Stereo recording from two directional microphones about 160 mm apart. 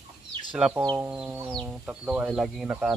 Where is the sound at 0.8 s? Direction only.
20° right (ahead or behind).